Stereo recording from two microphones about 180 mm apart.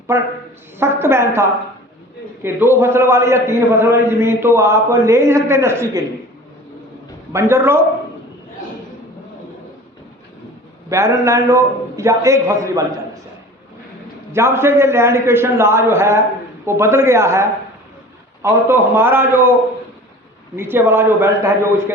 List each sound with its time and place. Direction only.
0.1 s a man's voice: 15° right (ahead or behind)
7.3 s a man's voice: 15° right (ahead or behind)
10.8 s a man's voice: 15° right (ahead or behind)
14.3 s a man's voice: 15° right (ahead or behind)
20.6 s a man's voice: 10° right (ahead or behind)